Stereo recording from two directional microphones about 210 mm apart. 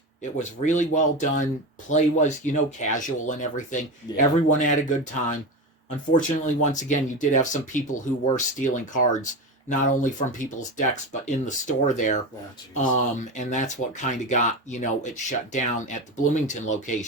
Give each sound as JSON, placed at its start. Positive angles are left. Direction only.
{"t": 0.2, "sound": "speech", "side_deg": 35}
{"t": 6.1, "sound": "speech", "side_deg": 35}